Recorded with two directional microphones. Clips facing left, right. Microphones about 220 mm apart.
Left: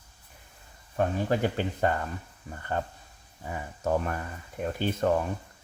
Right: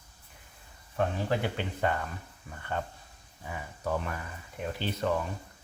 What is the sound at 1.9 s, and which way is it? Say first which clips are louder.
Speech: even; 40° left (ahead or behind).